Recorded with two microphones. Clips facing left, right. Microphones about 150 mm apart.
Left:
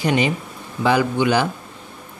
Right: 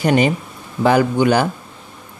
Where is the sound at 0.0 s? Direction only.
45° right (ahead or behind).